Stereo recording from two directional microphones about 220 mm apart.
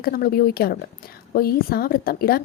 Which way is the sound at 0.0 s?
40° left (ahead or behind).